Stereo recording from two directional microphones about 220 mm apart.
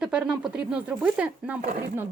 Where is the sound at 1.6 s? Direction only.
40° right (ahead or behind).